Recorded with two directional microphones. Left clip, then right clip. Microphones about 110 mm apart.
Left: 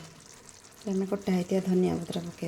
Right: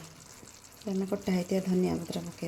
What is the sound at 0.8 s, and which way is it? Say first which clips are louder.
Speech: left 2 dB; 10° left (ahead or behind).